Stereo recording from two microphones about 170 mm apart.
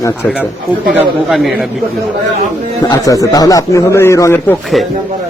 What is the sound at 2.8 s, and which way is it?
Speech, 20° left (ahead or behind).